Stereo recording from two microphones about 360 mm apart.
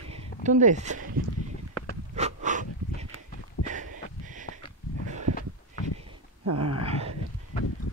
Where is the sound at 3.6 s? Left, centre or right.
Left.